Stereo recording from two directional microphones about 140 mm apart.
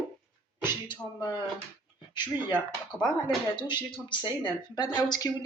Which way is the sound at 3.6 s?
35° left (ahead or behind).